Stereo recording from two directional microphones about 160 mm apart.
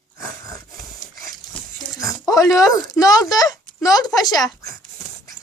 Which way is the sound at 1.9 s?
20° left (ahead or behind).